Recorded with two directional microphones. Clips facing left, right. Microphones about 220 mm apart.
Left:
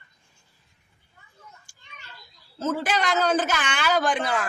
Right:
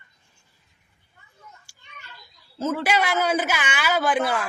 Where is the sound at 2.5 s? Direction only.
10° right (ahead or behind).